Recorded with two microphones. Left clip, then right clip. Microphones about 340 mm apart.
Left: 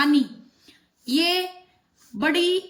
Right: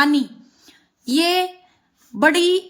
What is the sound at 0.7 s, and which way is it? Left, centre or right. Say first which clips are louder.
Child singing: right 3 dB; centre.